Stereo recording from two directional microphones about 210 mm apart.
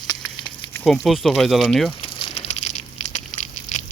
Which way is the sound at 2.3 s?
30° left (ahead or behind).